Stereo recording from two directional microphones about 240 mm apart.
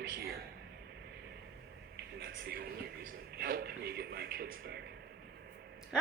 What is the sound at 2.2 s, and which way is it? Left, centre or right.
Speech, right.